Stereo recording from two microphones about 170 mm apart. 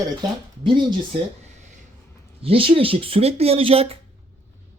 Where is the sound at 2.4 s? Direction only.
35° right (ahead or behind).